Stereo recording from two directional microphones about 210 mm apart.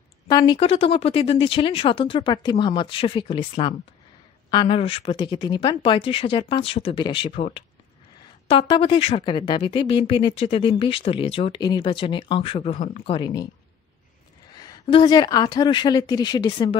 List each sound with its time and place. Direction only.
0.3 s speech: 20° left (ahead or behind)
14.6 s speech: 20° left (ahead or behind)